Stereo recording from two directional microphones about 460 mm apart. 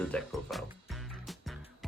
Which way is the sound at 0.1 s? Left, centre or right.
Centre.